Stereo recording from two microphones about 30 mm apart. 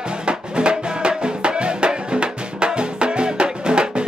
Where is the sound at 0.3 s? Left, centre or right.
Right.